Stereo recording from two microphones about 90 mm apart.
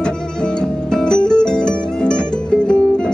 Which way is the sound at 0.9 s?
10° left (ahead or behind).